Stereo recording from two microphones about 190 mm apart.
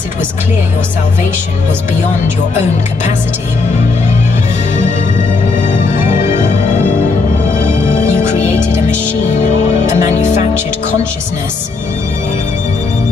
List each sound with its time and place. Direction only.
6.3 s music: 40° left (ahead or behind)
10.0 s music: 40° left (ahead or behind)